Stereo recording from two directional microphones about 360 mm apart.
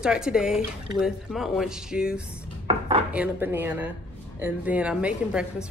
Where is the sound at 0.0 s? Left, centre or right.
Centre.